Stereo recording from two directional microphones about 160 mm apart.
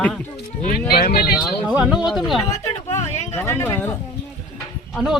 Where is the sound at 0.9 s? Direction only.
75° left (ahead or behind).